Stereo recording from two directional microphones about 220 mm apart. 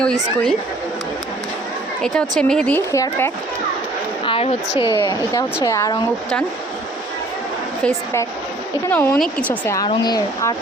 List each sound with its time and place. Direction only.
0.0 s speech: 5° left (ahead or behind)
2.0 s speech: centre (ahead or behind)
4.3 s a sound: 25° left (ahead or behind)
4.8 s speech: 20° left (ahead or behind)
8.9 s speech: 10° left (ahead or behind)